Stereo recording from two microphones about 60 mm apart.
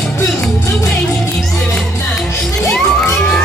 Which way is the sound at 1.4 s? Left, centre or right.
Centre.